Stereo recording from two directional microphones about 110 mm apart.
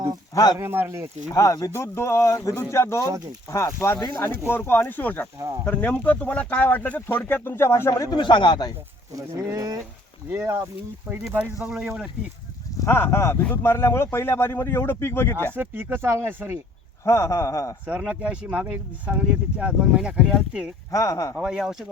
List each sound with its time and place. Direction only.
0.6 s speech: 20° right (ahead or behind)
1.3 s speech: 35° left (ahead or behind)
8.1 s speech: 45° left (ahead or behind)
9.1 s speech: 30° right (ahead or behind)
11.3 s speech: 10° right (ahead or behind)
12.8 s speech: 20° left (ahead or behind)
15.5 s speech: 20° right (ahead or behind)
17.0 s speech: 25° left (ahead or behind)
17.8 s speech: 10° right (ahead or behind)
20.9 s speech: 30° left (ahead or behind)
21.3 s speech: 5° right (ahead or behind)